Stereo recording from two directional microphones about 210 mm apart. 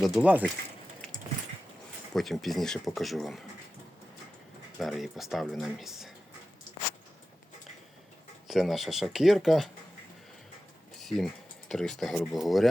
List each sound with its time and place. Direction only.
0.0 s speech: centre (ahead or behind)
2.1 s speech: centre (ahead or behind)
4.8 s speech: centre (ahead or behind)
8.4 s speech: centre (ahead or behind)
11.0 s a sound: centre (ahead or behind)
11.7 s speech: centre (ahead or behind)